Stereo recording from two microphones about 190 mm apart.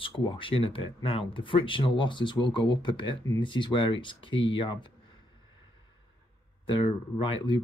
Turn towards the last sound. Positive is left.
turn(degrees=25)  # may be behind; listen again after turning